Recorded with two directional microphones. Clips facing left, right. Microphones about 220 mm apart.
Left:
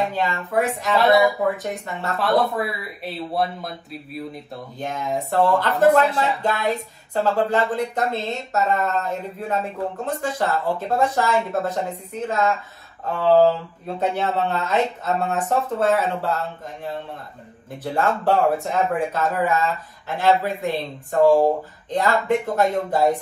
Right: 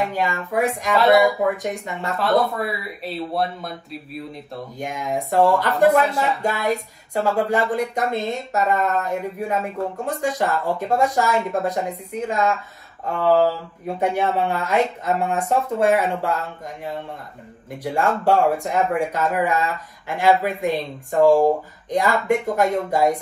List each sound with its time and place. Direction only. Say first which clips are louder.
0.1 s speech: even; 10° right (ahead or behind)
0.9 s speech: right 1 dB; centre (ahead or behind)
1.6 s speech: right 1 dB; 15° right (ahead or behind)
2.1 s speech: even; centre (ahead or behind)
4.7 s speech: even; 10° right (ahead or behind)
13.8 s speech: right 2 dB; 15° right (ahead or behind)
18.2 s speech: right 2 dB; 15° right (ahead or behind)